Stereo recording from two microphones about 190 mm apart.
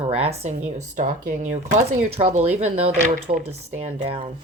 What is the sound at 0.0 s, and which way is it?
Speech, 35° right (ahead or behind).